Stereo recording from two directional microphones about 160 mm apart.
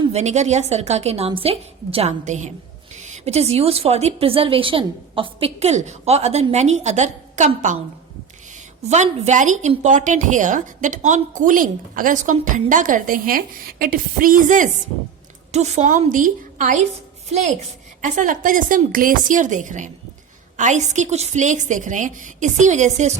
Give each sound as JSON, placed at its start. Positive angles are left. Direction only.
{"t": 0.0, "sound": "a woman's voice", "side_deg": -45}
{"t": 8.9, "sound": "a woman's voice", "side_deg": -45}
{"t": 18.0, "sound": "a woman's voice", "side_deg": -50}